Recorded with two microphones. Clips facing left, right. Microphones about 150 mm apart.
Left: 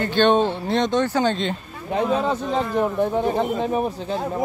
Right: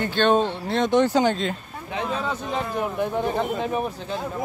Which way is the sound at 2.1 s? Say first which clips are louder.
Left 4 dB; 30° left (ahead or behind).